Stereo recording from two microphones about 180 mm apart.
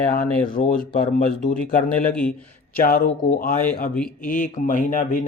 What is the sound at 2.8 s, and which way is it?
Speech, 50° left (ahead or behind).